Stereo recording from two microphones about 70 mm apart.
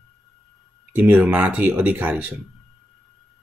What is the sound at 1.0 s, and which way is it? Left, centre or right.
Speech, right.